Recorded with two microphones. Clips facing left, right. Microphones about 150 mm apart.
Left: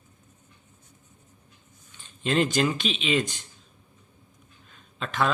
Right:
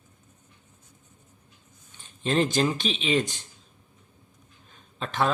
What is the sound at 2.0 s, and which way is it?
Speech, 35° right (ahead or behind).